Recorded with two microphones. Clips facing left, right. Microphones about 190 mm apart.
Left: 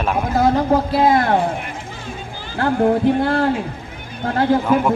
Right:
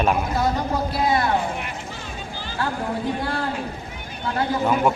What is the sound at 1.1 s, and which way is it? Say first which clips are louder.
Speech: left 5 dB; 55° left (ahead or behind).